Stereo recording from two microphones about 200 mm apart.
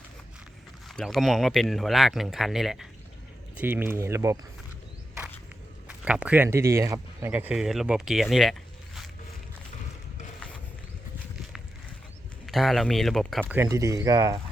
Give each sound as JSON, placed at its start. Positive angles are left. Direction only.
{"t": 0.9, "sound": "speech", "side_deg": 0}
{"t": 5.9, "sound": "speech", "side_deg": -5}
{"t": 12.5, "sound": "speech", "side_deg": 0}
{"t": 13.4, "sound": "speech", "side_deg": -10}